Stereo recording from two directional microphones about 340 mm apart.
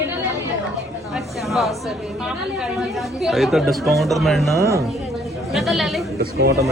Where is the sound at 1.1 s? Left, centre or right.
Centre.